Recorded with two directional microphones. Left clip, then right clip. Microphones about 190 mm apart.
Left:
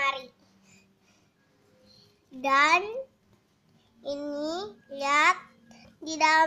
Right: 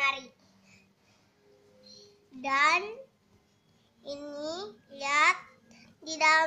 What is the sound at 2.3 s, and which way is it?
Speech, 55° left (ahead or behind).